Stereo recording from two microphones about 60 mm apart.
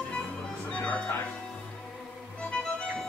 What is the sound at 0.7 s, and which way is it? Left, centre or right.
Music, centre.